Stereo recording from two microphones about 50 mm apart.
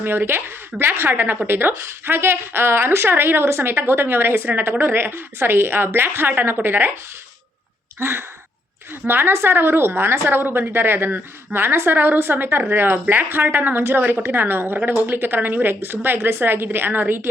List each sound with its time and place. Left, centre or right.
0.0 s a woman's voice: right
7.9 s a woman's voice: right